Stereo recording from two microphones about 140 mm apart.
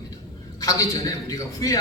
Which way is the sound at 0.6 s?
25° left (ahead or behind).